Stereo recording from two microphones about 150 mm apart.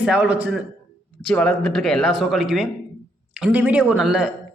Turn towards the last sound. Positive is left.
turn(degrees=-5)  # may be behind; listen again after turning